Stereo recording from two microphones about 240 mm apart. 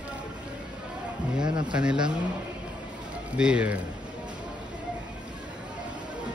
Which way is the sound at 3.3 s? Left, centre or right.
Centre.